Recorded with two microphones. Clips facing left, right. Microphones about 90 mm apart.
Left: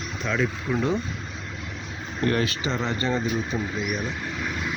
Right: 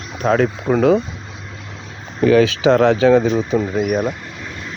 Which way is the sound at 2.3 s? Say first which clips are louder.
Right 17 dB; 90° right.